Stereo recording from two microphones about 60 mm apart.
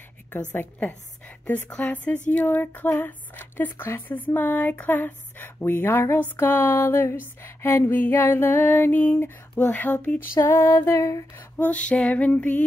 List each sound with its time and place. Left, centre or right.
0.3 s speech: left
10.3 s music: left
11.0 s a sound: left
11.3 s speech: left